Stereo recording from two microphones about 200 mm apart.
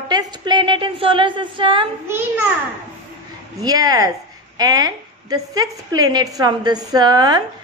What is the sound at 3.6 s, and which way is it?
A woman's voice, 20° right (ahead or behind).